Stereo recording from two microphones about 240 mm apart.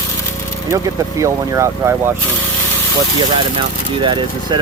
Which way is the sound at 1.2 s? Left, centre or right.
Centre.